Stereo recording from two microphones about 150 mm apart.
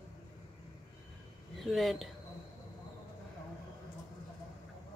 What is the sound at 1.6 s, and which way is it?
Speech, centre (ahead or behind).